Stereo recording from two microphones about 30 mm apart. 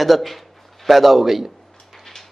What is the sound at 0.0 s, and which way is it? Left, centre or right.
Speech, centre.